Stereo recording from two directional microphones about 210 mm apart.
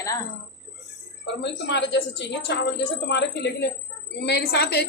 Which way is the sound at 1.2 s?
55° left (ahead or behind).